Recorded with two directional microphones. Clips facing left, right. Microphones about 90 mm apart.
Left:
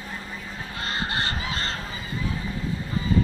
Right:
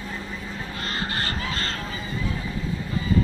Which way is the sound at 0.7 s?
20° left (ahead or behind).